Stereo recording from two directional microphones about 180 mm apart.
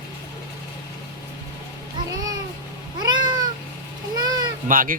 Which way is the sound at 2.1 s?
20° right (ahead or behind).